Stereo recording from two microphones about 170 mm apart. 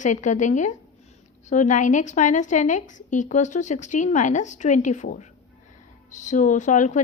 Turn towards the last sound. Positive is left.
turn(degrees=45)  # may be behind; listen again after turning